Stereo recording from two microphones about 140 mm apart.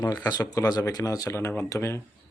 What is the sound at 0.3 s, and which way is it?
Speech, 25° left (ahead or behind).